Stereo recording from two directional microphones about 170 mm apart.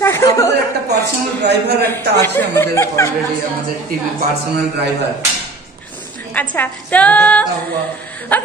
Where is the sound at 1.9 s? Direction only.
15° left (ahead or behind).